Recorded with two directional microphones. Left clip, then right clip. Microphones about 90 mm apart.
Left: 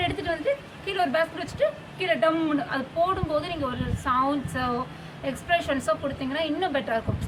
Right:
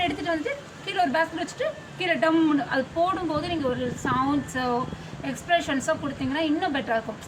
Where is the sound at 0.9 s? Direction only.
35° left (ahead or behind).